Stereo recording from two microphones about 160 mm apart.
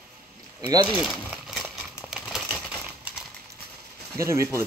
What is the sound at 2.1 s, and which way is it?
Typewriter, 5° right (ahead or behind).